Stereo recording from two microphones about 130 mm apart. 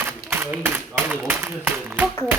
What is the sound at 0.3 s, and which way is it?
A man's voice, 15° right (ahead or behind).